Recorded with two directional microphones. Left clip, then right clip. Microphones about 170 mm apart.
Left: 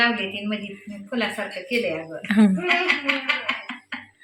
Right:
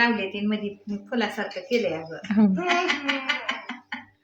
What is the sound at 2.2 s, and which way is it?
Speech, centre (ahead or behind).